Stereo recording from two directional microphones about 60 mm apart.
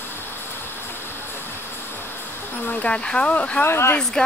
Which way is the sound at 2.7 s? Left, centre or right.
Centre.